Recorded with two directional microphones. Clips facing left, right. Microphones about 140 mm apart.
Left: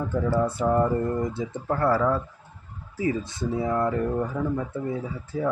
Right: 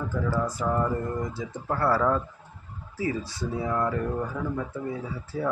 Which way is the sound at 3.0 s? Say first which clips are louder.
Left 3 dB; 20° left (ahead or behind).